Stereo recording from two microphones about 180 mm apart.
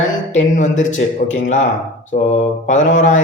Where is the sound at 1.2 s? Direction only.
50° left (ahead or behind).